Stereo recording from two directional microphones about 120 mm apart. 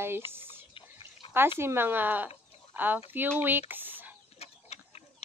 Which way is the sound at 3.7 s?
15° right (ahead or behind).